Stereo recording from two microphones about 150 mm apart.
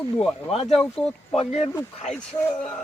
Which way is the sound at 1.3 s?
45° left (ahead or behind).